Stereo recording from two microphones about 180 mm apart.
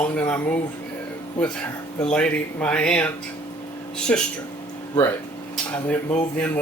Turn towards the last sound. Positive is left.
turn(degrees=10)  # may be behind; listen again after turning